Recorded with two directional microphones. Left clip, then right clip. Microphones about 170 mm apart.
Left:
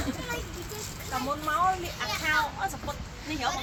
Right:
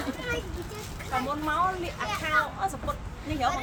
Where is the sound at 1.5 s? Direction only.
60° right (ahead or behind).